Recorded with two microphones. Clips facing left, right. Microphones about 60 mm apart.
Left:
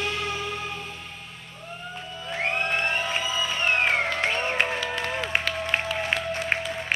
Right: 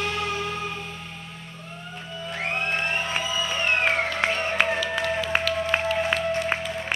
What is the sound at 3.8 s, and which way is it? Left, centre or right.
Music, right.